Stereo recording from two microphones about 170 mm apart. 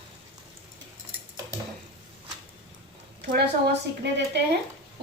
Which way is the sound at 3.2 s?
70° right (ahead or behind).